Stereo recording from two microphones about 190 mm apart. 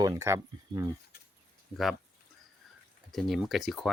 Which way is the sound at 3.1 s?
Centre (ahead or behind).